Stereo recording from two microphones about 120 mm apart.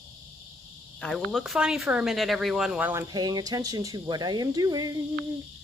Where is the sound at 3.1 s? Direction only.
35° right (ahead or behind).